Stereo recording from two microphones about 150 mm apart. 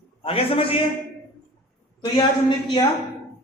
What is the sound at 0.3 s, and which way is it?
Speech, 40° left (ahead or behind).